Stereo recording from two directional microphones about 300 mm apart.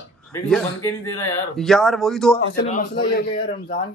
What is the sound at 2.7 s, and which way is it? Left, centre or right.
Speech, left.